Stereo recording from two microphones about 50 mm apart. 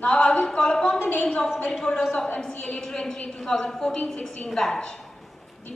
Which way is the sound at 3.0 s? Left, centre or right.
Centre.